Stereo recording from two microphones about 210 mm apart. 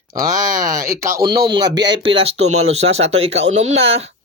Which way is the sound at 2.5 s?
90° right.